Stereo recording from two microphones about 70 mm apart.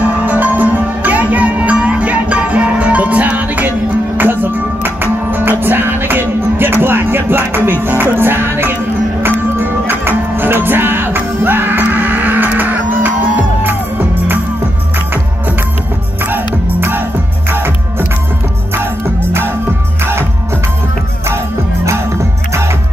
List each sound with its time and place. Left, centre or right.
0.0 s music: right
16.2 s music: right
20.0 s music: right